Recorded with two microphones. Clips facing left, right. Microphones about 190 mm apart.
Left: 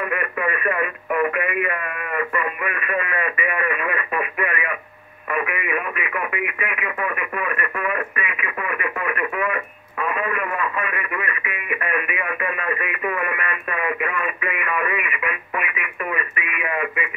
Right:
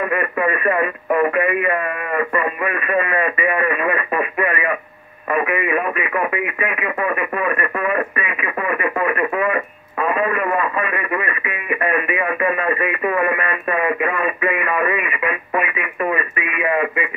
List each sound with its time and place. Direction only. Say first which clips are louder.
0.1 s radio: right 5 dB; 35° right (ahead or behind)